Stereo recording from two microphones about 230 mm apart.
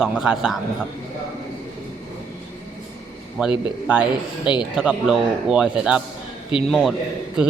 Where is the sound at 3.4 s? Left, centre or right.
Centre.